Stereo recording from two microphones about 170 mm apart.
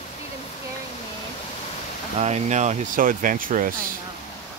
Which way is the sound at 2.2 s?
40° right (ahead or behind).